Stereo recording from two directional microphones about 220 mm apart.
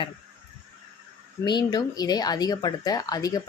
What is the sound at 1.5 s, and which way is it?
Speech, 20° left (ahead or behind).